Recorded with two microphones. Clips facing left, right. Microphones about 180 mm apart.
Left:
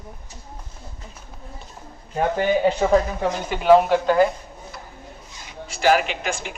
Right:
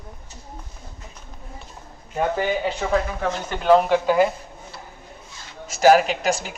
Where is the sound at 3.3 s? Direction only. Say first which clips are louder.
Left 2 dB; 10° left (ahead or behind).